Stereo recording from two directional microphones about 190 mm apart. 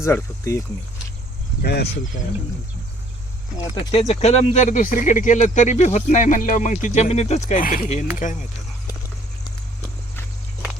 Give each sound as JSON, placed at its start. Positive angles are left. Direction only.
{"t": 0.0, "sound": "speech", "side_deg": 15}
{"t": 1.6, "sound": "speech", "side_deg": 60}
{"t": 3.9, "sound": "speech", "side_deg": 35}